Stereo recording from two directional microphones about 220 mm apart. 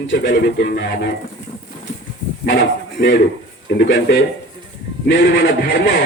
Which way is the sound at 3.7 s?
50° left (ahead or behind).